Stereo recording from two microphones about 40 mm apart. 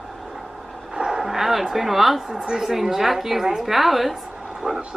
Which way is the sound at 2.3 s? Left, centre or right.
Centre.